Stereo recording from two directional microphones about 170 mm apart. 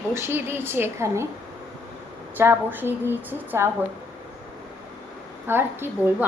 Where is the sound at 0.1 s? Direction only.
15° right (ahead or behind).